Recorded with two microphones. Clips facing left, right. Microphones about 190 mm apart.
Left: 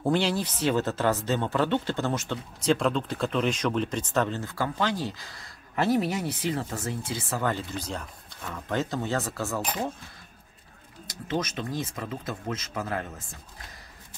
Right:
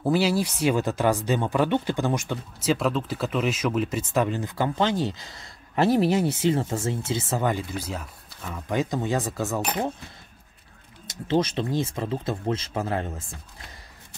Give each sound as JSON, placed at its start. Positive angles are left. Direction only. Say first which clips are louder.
{"t": 0.0, "sound": "speech", "louder": "right 3 dB", "side_deg": -5}
{"t": 9.6, "sound": "speech", "louder": "right 3 dB", "side_deg": -65}
{"t": 11.1, "sound": "speech", "louder": "right 6 dB", "side_deg": -30}